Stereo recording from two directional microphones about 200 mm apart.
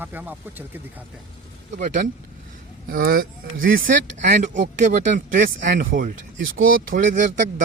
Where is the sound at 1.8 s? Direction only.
40° right (ahead or behind).